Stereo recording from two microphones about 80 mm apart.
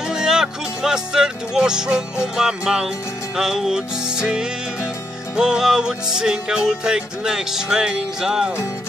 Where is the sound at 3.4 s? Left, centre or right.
Centre.